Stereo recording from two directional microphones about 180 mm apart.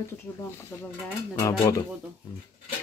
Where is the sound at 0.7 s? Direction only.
10° left (ahead or behind).